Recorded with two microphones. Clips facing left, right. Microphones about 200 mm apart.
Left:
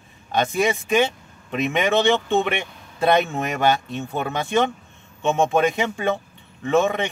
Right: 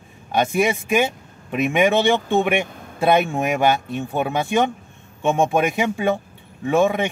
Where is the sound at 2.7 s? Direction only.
50° right (ahead or behind).